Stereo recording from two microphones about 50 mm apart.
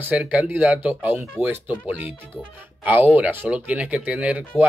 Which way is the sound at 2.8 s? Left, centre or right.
Right.